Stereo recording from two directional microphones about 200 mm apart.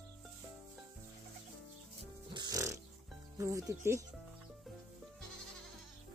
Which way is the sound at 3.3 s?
15° right (ahead or behind).